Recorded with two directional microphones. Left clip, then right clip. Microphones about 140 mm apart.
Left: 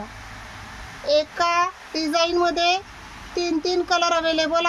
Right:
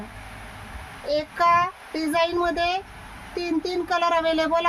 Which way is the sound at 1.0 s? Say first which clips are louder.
Left 1 dB; 20° right (ahead or behind).